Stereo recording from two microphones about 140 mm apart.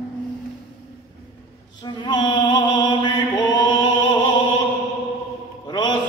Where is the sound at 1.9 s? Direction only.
30° left (ahead or behind).